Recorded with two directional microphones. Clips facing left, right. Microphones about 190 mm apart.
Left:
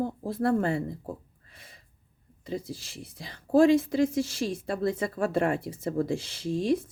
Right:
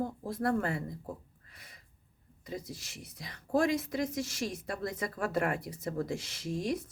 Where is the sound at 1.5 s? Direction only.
25° left (ahead or behind).